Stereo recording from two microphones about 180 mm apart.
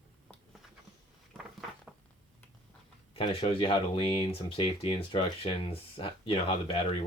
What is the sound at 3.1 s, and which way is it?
Speech, 30° left (ahead or behind).